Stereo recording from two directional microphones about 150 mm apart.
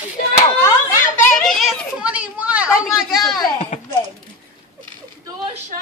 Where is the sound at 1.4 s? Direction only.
Centre (ahead or behind).